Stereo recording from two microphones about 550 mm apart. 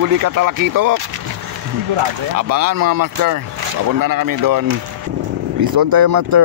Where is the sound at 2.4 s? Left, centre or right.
Right.